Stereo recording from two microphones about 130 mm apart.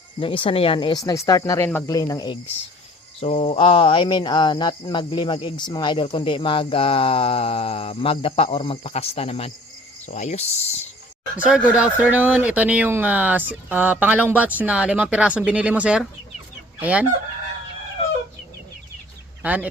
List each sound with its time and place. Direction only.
0.2 s speech: 45° left (ahead or behind)
3.2 s speech: 50° left (ahead or behind)
10.1 s speech: 65° left (ahead or behind)
11.3 s speech: 10° right (ahead or behind)
19.4 s speech: 10° right (ahead or behind)